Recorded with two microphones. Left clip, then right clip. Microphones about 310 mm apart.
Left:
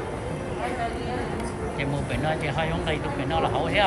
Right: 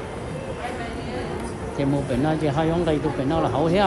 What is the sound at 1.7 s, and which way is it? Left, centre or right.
Speech, centre.